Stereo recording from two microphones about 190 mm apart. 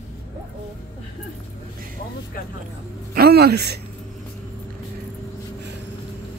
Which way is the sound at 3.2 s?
55° right (ahead or behind).